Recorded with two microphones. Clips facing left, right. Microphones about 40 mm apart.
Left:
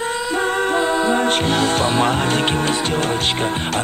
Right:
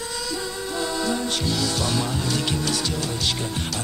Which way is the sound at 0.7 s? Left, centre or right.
Left.